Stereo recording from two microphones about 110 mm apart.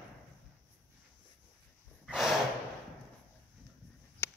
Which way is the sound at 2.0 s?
Centre (ahead or behind).